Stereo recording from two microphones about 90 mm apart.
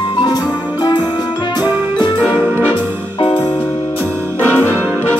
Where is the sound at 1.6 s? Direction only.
20° right (ahead or behind).